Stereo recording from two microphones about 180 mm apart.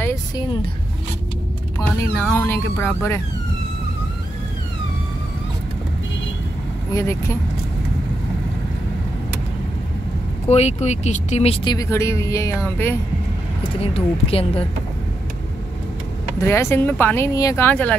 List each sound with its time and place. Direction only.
2.3 s speech: 10° left (ahead or behind)
6.9 s speech: 15° left (ahead or behind)
10.5 s speech: 40° left (ahead or behind); by 12.9 s 10° left (ahead or behind)
13.9 s speech: 30° left (ahead or behind)
16.3 s speech: 15° left (ahead or behind)